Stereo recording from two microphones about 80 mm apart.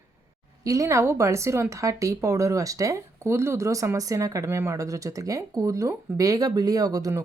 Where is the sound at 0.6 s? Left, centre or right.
Right.